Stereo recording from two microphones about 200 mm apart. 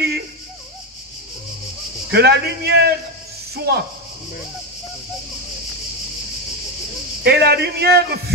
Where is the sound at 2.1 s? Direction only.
55° right (ahead or behind).